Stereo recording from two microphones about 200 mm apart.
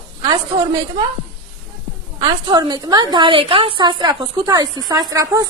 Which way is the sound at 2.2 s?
20° right (ahead or behind).